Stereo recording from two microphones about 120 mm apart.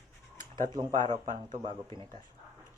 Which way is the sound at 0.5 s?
35° right (ahead or behind).